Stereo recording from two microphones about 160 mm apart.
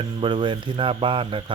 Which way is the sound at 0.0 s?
30° right (ahead or behind).